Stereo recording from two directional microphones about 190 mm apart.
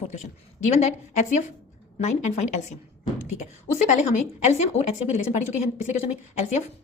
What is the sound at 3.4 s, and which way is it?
A woman's voice, 35° left (ahead or behind).